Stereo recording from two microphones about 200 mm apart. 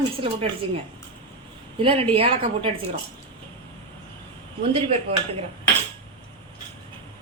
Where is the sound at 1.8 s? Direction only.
25° right (ahead or behind).